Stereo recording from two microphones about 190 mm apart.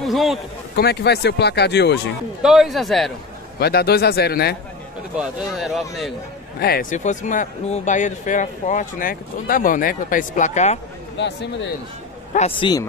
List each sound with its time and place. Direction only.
0.0 s a sound: centre (ahead or behind)
0.7 s speech: 60° left (ahead or behind)
2.4 s a man's voice: centre (ahead or behind)
3.5 s speech: 55° left (ahead or behind)
5.1 s a man's voice: centre (ahead or behind)
6.6 s speech: 50° left (ahead or behind)
11.1 s speech: 70° left (ahead or behind)
12.4 s speech: 30° left (ahead or behind)